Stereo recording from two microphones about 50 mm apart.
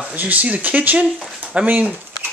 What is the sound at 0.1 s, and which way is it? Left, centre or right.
Speech, right.